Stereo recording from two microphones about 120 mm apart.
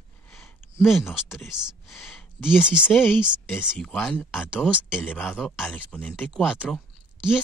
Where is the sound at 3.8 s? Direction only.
5° left (ahead or behind).